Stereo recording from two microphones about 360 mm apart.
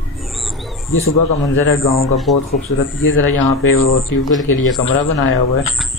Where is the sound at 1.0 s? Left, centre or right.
Left.